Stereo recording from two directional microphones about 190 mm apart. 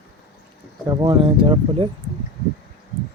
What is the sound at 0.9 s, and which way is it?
Speech, 20° right (ahead or behind).